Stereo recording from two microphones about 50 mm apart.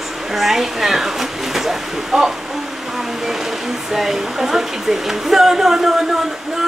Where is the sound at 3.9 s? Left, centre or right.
Centre.